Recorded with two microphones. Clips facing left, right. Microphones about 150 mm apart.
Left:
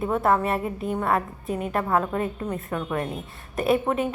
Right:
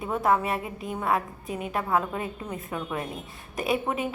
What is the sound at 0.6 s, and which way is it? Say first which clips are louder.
A woman's voice: left 5 dB; 40° left (ahead or behind).